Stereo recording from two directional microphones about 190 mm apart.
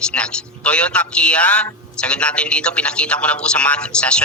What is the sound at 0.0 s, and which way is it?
A man's voice, 5° left (ahead or behind).